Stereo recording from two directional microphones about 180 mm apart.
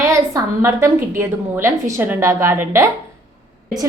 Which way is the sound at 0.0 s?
15° right (ahead or behind).